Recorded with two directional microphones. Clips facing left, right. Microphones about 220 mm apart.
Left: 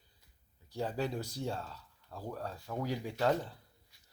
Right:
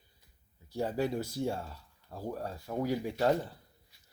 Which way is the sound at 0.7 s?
10° right (ahead or behind).